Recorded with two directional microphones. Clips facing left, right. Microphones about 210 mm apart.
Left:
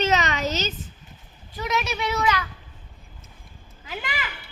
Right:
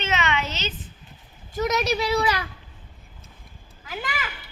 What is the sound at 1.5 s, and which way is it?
Speech, 40° right (ahead or behind).